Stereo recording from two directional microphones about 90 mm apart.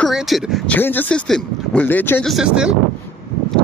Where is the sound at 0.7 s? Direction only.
20° left (ahead or behind).